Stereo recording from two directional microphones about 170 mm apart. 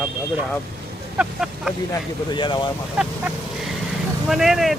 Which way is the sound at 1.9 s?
25° left (ahead or behind).